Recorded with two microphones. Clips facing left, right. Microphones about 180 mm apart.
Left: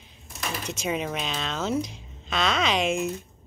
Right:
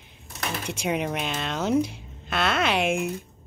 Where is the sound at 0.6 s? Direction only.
10° right (ahead or behind).